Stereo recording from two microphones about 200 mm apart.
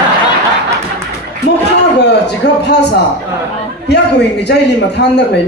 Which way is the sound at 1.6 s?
60° left (ahead or behind).